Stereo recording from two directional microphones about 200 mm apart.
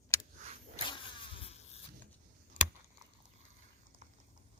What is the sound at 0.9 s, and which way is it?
Vehicle, 25° left (ahead or behind).